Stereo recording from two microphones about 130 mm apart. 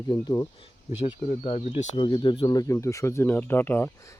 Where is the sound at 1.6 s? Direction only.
65° left (ahead or behind).